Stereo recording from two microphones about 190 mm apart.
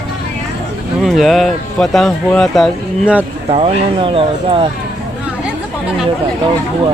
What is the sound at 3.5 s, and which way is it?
Speech, 30° right (ahead or behind).